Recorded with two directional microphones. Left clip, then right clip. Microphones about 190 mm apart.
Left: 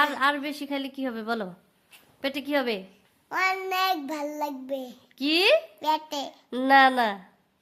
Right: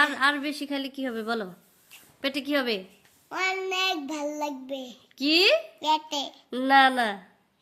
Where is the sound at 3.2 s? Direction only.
20° left (ahead or behind).